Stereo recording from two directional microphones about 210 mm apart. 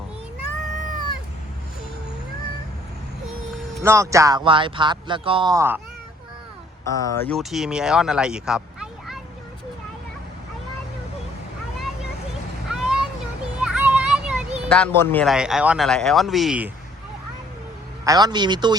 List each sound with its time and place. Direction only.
3.8 s speech: 15° right (ahead or behind)
6.8 s speech: 15° left (ahead or behind)
7.3 s speech: centre (ahead or behind)
12.7 s vehicle: 5° right (ahead or behind)
13.6 s a sound: 5° right (ahead or behind)
14.7 s a man's voice: 10° left (ahead or behind)
18.0 s speech: 20° right (ahead or behind)